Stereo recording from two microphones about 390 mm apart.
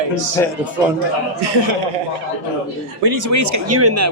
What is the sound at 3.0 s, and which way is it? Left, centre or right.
Speech, right.